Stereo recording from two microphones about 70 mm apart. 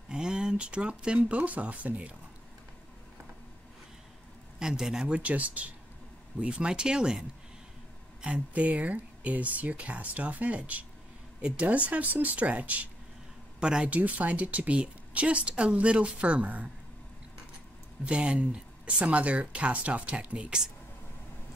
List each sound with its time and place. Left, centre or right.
0.1 s speech: centre
4.6 s a woman's voice: centre
18.0 s a woman's voice: centre